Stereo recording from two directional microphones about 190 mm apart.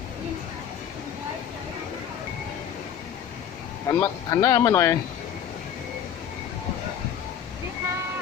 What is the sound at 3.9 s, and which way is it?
Speech, 15° left (ahead or behind).